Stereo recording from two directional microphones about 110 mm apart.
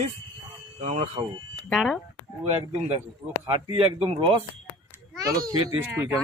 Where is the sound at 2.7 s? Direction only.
75° right (ahead or behind).